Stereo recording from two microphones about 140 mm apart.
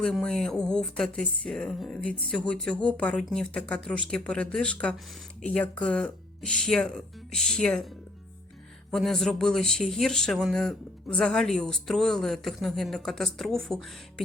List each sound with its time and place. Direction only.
0.0 s speech: 5° left (ahead or behind)
8.9 s speech: centre (ahead or behind)